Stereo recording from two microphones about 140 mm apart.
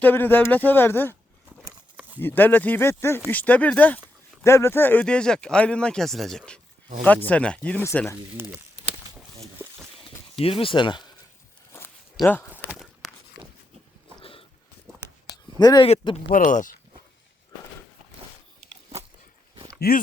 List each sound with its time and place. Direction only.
0.0 s speech: 15° left (ahead or behind)
2.0 s a sound: 10° right (ahead or behind)
2.2 s speech: 15° left (ahead or behind)
8.4 s walk: 15° right (ahead or behind)
10.4 s speech: 40° left (ahead or behind)
12.2 s speech: centre (ahead or behind)
12.7 s walk: centre (ahead or behind)
14.2 s a sound: 40° left (ahead or behind)
15.5 s speech: 30° left (ahead or behind)
16.3 s speech: 65° left (ahead or behind)
19.8 s speech: 90° left